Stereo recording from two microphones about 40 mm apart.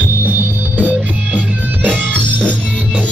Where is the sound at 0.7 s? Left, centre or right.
Right.